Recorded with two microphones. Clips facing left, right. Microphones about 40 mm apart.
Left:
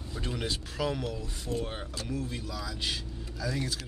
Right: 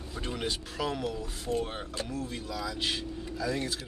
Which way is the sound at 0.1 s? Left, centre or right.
Centre.